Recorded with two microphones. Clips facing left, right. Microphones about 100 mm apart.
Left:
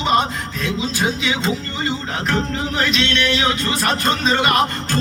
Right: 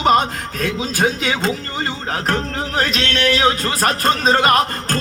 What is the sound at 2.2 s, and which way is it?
Music, 45° right (ahead or behind).